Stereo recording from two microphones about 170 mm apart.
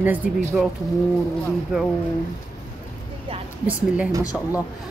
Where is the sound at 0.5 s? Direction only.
5° right (ahead or behind).